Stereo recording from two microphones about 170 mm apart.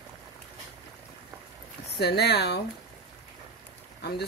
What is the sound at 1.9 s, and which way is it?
Speech, 75° left (ahead or behind).